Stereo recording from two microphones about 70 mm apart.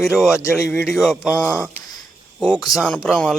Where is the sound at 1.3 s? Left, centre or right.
Left.